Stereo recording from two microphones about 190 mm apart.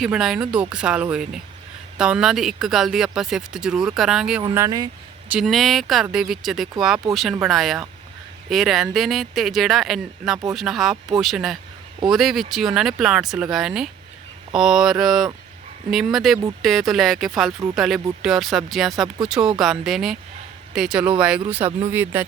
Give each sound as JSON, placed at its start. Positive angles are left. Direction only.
{"t": 0.0, "sound": "speech", "side_deg": 0}
{"t": 4.5, "sound": "speech", "side_deg": -15}
{"t": 5.3, "sound": "speech", "side_deg": 0}